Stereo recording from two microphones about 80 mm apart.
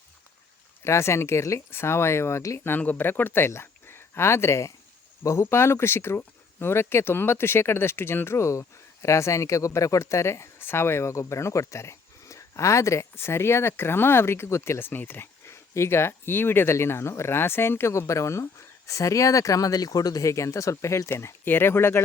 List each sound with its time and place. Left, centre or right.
0.9 s speech: left
2.7 s speech: left